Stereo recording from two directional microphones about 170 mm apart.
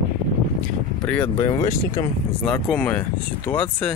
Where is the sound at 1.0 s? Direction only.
10° left (ahead or behind).